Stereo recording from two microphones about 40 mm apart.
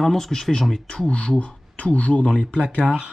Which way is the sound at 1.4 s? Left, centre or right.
Left.